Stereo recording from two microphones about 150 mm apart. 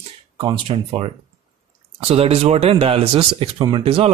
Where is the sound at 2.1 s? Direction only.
40° right (ahead or behind).